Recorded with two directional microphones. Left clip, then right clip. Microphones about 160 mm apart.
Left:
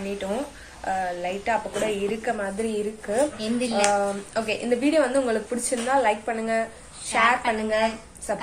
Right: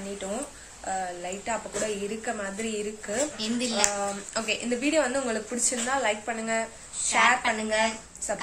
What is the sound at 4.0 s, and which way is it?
Speech, 5° left (ahead or behind).